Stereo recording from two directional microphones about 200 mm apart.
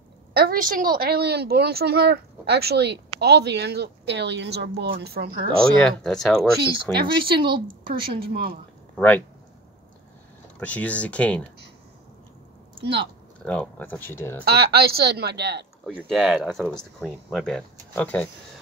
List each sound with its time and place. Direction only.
0.3 s a woman's voice: 50° right (ahead or behind)
5.8 s speech: 5° left (ahead or behind)
7.0 s speech: 25° right (ahead or behind)
8.3 s a woman's voice: 45° right (ahead or behind)
8.9 s speech: 10° left (ahead or behind)
10.6 s speech: 5° left (ahead or behind)
13.5 s speech: 10° left (ahead or behind)
14.4 s a woman's voice: 50° right (ahead or behind)
15.9 s speech: centre (ahead or behind)